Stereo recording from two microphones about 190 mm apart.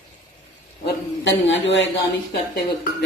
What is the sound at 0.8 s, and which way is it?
A man's voice, 75° left (ahead or behind).